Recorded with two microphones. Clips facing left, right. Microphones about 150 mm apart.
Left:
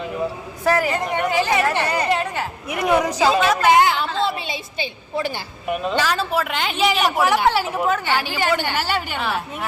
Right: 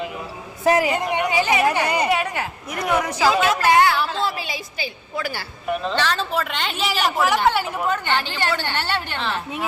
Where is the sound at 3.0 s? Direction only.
15° left (ahead or behind).